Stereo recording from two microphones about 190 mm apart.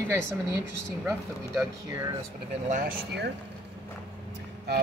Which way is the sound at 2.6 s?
40° right (ahead or behind).